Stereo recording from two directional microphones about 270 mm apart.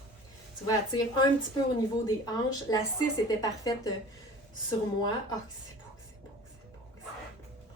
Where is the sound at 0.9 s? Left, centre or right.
Left.